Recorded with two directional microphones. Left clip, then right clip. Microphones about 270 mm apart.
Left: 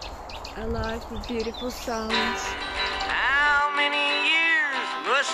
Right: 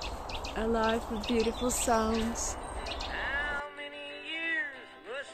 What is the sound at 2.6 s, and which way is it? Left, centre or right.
Music, left.